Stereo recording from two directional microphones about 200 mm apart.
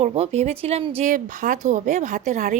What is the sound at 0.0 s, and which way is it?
A woman's voice, 30° right (ahead or behind).